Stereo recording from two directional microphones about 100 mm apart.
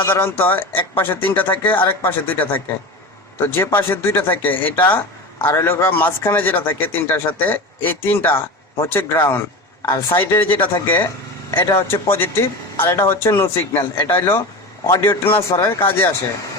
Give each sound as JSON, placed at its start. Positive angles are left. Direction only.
{"t": 0.0, "sound": "a man's voice", "side_deg": 25}
{"t": 15.2, "sound": "speech", "side_deg": 65}
{"t": 15.5, "sound": "a man's voice", "side_deg": 25}